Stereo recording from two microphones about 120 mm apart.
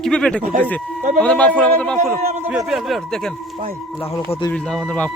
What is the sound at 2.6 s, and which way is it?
Speech, 5° right (ahead or behind).